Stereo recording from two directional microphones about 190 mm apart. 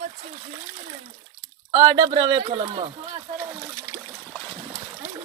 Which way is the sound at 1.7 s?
25° right (ahead or behind).